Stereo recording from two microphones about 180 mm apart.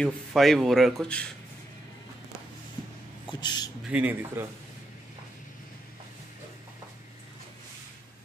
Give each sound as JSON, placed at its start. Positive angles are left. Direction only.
{"t": 0.0, "sound": "speech", "side_deg": 0}
{"t": 3.3, "sound": "speech", "side_deg": 25}
{"t": 3.9, "sound": "a man's voice", "side_deg": -10}